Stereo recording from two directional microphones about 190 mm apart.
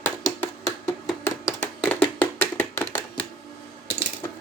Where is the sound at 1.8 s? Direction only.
5° left (ahead or behind).